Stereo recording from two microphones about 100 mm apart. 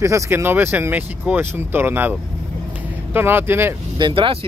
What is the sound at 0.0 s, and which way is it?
Speech, 30° right (ahead or behind).